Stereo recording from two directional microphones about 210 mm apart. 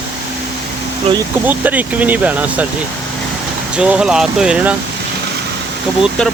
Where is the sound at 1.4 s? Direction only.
10° right (ahead or behind).